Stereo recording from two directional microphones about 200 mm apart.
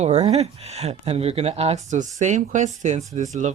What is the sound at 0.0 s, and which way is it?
Speech, 35° right (ahead or behind).